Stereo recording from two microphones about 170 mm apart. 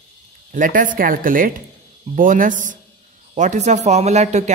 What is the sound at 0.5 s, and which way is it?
Speech, 50° right (ahead or behind).